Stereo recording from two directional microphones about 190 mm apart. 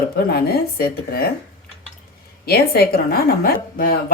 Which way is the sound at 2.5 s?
55° left (ahead or behind).